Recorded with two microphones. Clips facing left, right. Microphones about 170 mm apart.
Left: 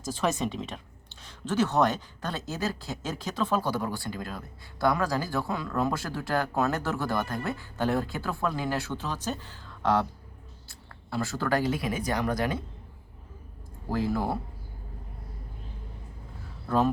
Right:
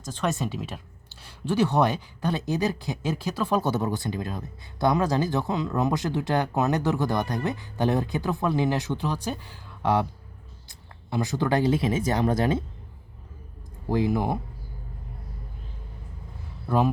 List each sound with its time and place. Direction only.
0.0 s speech: 5° left (ahead or behind)
3.6 s speech: 20° right (ahead or behind)
13.9 s speech: 15° right (ahead or behind)
16.6 s speech: 10° right (ahead or behind)